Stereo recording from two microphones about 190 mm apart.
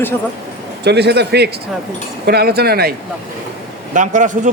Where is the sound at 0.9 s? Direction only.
60° right (ahead or behind).